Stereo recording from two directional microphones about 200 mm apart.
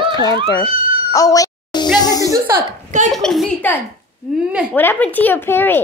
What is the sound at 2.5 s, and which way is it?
Speech, 40° right (ahead or behind).